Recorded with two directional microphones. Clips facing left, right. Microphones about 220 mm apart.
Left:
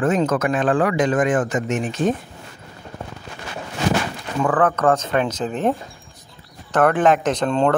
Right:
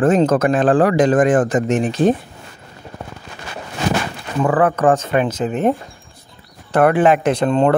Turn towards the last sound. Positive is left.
turn(degrees=-5)  # may be behind; listen again after turning